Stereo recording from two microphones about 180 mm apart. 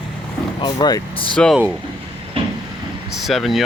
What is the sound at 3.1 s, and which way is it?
Speech, centre (ahead or behind).